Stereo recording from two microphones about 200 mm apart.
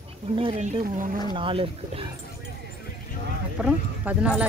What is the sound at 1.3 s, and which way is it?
Speech, 25° right (ahead or behind).